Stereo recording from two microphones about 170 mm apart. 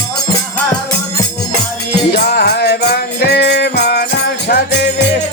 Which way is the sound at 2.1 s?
70° left (ahead or behind).